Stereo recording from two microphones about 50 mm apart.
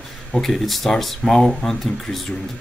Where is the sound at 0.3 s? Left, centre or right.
Centre.